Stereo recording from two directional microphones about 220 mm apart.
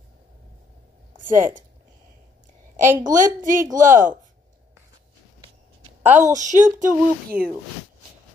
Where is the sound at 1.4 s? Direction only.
35° right (ahead or behind).